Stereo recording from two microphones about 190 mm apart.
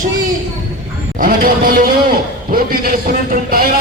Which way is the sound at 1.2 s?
50° right (ahead or behind).